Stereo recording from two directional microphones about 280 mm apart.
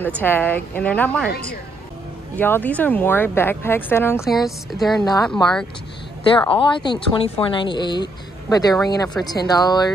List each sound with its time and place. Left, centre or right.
0.0 s a woman's voice: centre
2.3 s speech: centre
6.5 s speech: centre